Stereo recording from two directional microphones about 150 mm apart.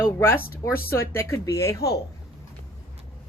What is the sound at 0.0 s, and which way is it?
Speech, 15° left (ahead or behind).